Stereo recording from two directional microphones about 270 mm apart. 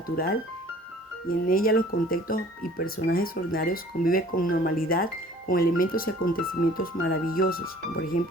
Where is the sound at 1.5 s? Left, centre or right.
Left.